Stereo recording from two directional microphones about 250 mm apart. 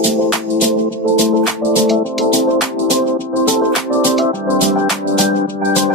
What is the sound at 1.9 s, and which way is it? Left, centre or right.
Music, centre.